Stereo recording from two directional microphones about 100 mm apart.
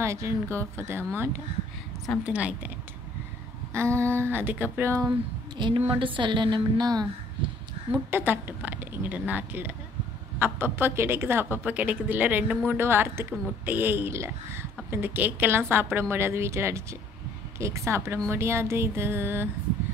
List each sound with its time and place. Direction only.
0.0 s a woman's voice: 30° right (ahead or behind); by 2.7 s 15° right (ahead or behind)
3.7 s a woman's voice: 25° right (ahead or behind)
5.8 s a woman's voice: 60° right (ahead or behind); by 7.1 s 40° right (ahead or behind)
8.1 s a woman's voice: 20° right (ahead or behind)